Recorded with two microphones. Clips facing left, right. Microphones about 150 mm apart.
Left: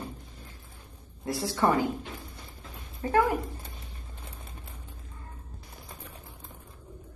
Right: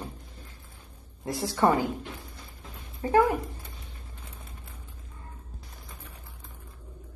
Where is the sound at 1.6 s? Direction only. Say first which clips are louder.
Right 2 dB; 20° right (ahead or behind).